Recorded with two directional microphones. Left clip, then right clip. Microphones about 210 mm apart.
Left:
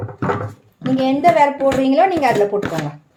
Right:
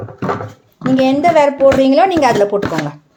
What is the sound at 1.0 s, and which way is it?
Speech, 40° right (ahead or behind).